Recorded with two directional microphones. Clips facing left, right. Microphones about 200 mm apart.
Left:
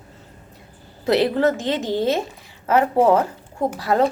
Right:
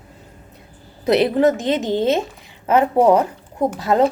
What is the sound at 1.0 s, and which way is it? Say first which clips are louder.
A woman's voice: right 3 dB; 20° right (ahead or behind).